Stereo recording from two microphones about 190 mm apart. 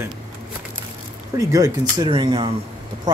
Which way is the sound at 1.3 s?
20° right (ahead or behind).